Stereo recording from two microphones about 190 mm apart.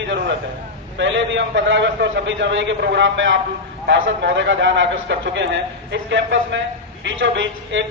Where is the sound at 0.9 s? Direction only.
75° right (ahead or behind).